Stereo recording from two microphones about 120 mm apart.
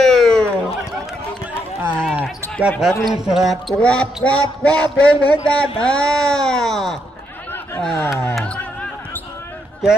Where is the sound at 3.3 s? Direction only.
Centre (ahead or behind).